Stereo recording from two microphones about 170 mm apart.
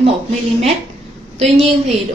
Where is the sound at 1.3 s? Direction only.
40° right (ahead or behind).